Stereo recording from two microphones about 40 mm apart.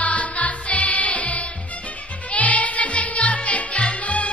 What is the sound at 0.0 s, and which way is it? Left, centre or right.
Music, left.